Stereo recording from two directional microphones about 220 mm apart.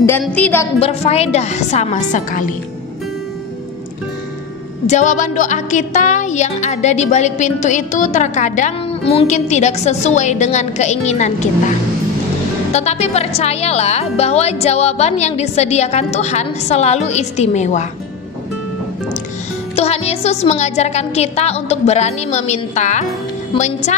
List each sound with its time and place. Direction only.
0.2 s a woman's voice: 5° left (ahead or behind)
0.7 s a woman's voice: 30° left (ahead or behind)
4.8 s a woman's voice: 35° left (ahead or behind)
12.7 s a woman's voice: 30° left (ahead or behind)
19.7 s a woman's voice: 30° left (ahead or behind)